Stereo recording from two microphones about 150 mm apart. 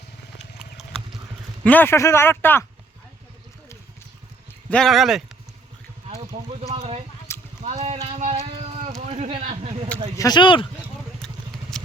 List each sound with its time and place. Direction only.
1.6 s a man's voice: 10° left (ahead or behind)
4.7 s speech: centre (ahead or behind)
6.1 s a sound: 45° right (ahead or behind)
8.0 s music: 40° right (ahead or behind)
9.0 s a sound: 50° right (ahead or behind)
9.4 s speech: 50° right (ahead or behind)
10.2 s speech: 30° left (ahead or behind)
11.7 s vehicle: 5° left (ahead or behind)